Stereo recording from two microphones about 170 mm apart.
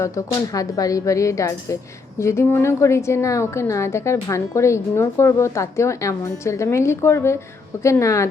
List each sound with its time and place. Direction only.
0.5 s a woman's voice: 20° left (ahead or behind)